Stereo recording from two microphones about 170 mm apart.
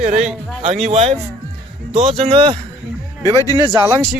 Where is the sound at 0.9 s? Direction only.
40° right (ahead or behind).